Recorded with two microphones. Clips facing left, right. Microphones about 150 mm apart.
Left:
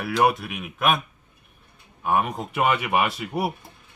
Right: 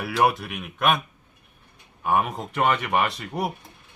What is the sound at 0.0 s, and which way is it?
Speech, centre (ahead or behind).